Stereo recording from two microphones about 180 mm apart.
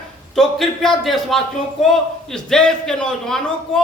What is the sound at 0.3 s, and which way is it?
A man's voice, centre (ahead or behind).